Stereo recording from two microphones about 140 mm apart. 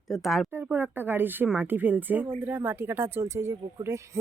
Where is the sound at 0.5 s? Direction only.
15° right (ahead or behind).